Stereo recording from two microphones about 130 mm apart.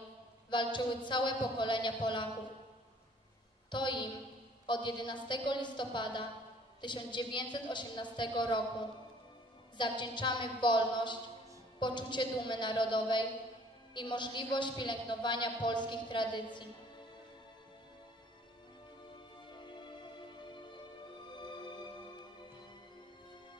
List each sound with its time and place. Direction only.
0.5 s a woman's voice: 35° left (ahead or behind)
3.7 s a woman's voice: 35° left (ahead or behind)
9.8 s a woman's voice: 35° left (ahead or behind)
19.5 s music: 35° left (ahead or behind)
21.4 s music: 35° left (ahead or behind)